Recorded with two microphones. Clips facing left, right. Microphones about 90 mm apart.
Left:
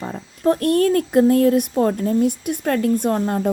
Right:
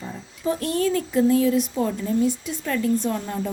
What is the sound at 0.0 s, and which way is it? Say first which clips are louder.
Speech: left 7 dB; 60° left (ahead or behind).